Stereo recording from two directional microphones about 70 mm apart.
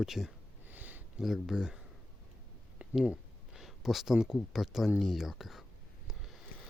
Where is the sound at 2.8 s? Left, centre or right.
Right.